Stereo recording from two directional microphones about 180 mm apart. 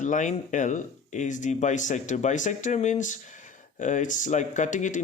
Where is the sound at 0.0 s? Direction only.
45° left (ahead or behind).